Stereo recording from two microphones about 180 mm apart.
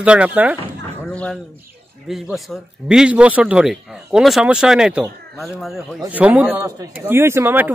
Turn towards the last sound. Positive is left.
turn(degrees=-10)  # may be behind; listen again after turning